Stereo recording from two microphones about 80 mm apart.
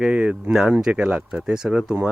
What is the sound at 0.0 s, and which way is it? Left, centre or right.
Speech, centre.